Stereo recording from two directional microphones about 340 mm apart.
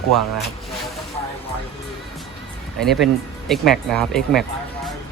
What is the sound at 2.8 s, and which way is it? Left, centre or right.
Speech, centre.